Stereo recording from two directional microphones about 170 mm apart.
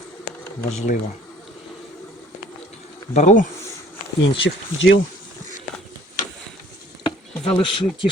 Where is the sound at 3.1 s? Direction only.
45° left (ahead or behind).